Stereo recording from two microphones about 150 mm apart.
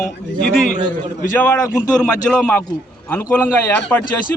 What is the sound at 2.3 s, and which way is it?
Speech, 15° left (ahead or behind).